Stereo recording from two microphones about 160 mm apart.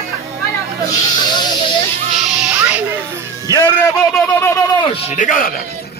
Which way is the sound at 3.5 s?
20° right (ahead or behind).